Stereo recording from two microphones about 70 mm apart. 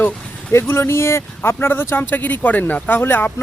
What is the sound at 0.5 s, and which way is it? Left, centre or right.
Speech, left.